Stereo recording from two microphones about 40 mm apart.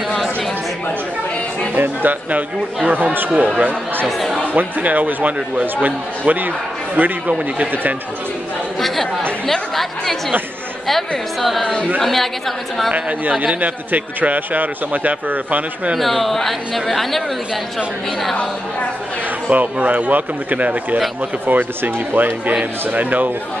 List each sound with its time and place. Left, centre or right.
1.8 s speech: right
3.3 s a man's voice: right
8.8 s chatter: centre
9.5 s speech: centre
13.6 s a man's voice: right
16.0 s speech: centre
19.5 s speech: right
21.5 s a man's voice: right